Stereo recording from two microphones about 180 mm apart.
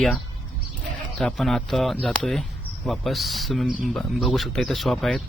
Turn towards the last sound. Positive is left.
turn(degrees=0)  # may be behind; listen again after turning